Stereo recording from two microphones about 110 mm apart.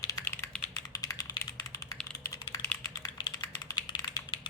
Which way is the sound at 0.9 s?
30° left (ahead or behind).